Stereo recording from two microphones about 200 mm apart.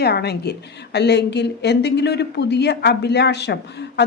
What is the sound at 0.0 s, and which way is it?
Speech, 55° left (ahead or behind).